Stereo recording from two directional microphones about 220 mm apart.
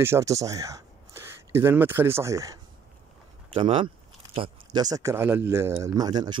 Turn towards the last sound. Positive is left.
turn(degrees=-20)  # may be behind; listen again after turning